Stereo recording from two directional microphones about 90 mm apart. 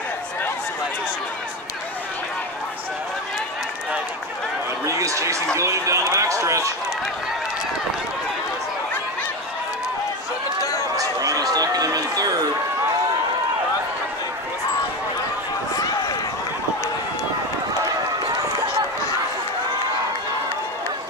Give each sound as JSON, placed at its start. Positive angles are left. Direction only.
{"t": 4.8, "sound": "chatter", "side_deg": -35}
{"t": 5.6, "sound": "speech", "side_deg": -35}
{"t": 11.0, "sound": "a sound", "side_deg": -45}
{"t": 15.7, "sound": "run", "side_deg": 45}